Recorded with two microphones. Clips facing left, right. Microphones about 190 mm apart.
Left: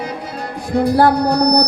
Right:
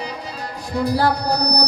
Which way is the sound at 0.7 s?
50° left (ahead or behind).